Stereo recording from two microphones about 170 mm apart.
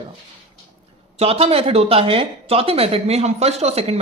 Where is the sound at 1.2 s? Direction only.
35° right (ahead or behind).